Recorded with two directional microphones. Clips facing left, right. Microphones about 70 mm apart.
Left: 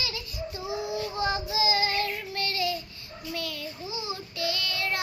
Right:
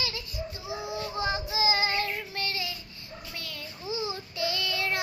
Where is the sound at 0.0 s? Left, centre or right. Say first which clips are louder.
Even; right.